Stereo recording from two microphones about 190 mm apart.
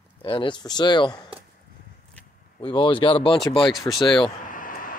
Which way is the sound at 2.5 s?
25° left (ahead or behind).